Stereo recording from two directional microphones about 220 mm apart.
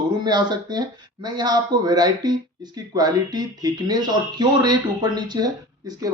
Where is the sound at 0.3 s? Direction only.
20° right (ahead or behind).